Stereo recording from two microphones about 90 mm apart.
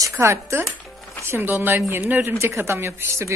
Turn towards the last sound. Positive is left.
turn(degrees=-30)  # may be behind; listen again after turning